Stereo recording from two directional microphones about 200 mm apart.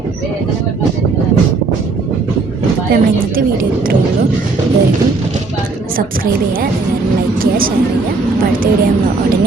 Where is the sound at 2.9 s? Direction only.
45° right (ahead or behind).